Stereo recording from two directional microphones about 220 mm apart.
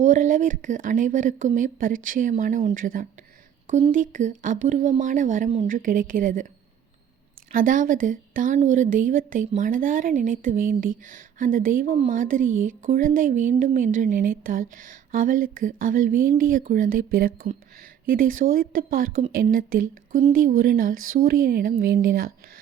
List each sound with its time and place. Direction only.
0.0 s speech: 35° right (ahead or behind)
7.5 s speech: 35° right (ahead or behind)